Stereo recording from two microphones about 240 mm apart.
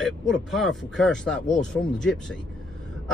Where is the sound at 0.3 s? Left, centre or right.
Centre.